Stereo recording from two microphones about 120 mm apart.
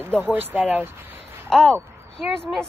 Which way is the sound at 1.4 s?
5° left (ahead or behind).